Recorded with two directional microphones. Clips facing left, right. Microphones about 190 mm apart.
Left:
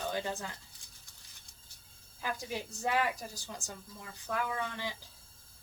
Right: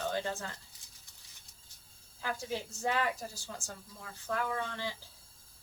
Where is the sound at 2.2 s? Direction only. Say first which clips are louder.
Right 1 dB; 15° left (ahead or behind).